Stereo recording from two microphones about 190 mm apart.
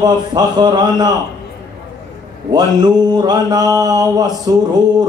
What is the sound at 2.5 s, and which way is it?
Speech, 20° right (ahead or behind).